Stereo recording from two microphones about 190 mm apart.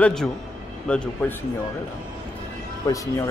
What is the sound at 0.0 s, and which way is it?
Speech, 5° left (ahead or behind).